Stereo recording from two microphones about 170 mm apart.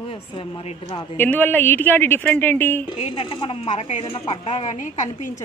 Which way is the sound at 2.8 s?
30° left (ahead or behind).